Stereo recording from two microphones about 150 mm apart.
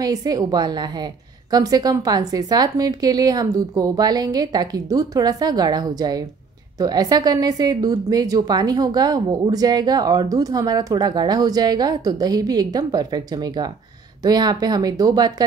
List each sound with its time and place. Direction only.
0.0 s a woman's voice: 25° right (ahead or behind)